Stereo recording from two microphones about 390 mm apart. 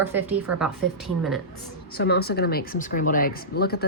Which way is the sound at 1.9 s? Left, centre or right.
Left.